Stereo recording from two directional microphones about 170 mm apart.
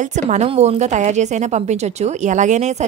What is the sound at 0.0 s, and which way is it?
A woman's voice, 45° right (ahead or behind).